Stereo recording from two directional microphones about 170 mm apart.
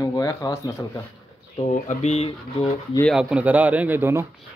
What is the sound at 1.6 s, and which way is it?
Speech, 45° left (ahead or behind).